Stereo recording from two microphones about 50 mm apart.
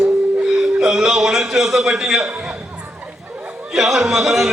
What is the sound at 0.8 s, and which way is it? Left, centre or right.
A man's voice, centre.